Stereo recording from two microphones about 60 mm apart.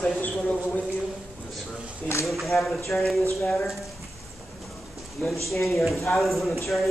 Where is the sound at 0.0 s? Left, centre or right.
Left.